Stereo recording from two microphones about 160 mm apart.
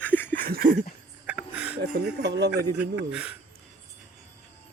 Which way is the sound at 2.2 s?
90° right.